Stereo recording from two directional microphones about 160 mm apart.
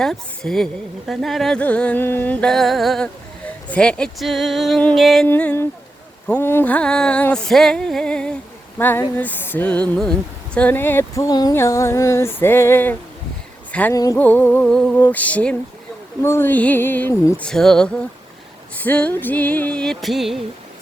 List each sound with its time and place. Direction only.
0.0 s a woman's voice: 5° left (ahead or behind)
5.3 s female singing: 10° left (ahead or behind)
6.2 s a woman's voice: 10° left (ahead or behind)
8.8 s female singing: 10° left (ahead or behind)
13.7 s a sound: 10° left (ahead or behind)
13.9 s a sound: 20° left (ahead or behind)
14.2 s female singing: 10° left (ahead or behind)
17.4 s a woman's voice: 5° left (ahead or behind)
18.8 s female singing: 10° left (ahead or behind)